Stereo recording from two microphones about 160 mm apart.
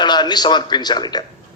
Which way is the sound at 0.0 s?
25° left (ahead or behind).